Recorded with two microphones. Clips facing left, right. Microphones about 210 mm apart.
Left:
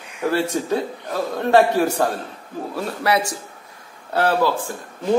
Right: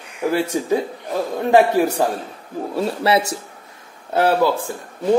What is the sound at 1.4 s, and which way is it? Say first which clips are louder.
Speech: right 1 dB; 10° right (ahead or behind).